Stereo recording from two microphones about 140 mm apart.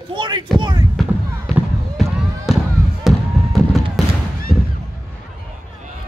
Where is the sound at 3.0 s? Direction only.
Centre (ahead or behind).